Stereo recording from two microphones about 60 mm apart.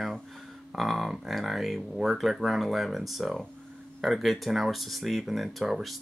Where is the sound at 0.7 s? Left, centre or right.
Centre.